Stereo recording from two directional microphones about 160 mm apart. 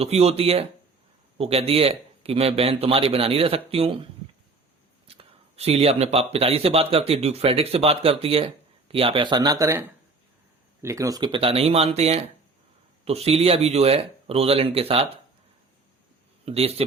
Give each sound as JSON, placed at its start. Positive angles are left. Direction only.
{"t": 0.0, "sound": "speech", "side_deg": -40}
{"t": 5.0, "sound": "speech", "side_deg": -40}
{"t": 10.8, "sound": "speech", "side_deg": -20}
{"t": 16.5, "sound": "speech", "side_deg": -40}